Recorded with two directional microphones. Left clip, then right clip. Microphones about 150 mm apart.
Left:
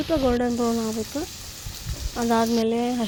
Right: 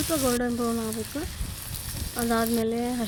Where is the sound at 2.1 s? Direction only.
20° left (ahead or behind).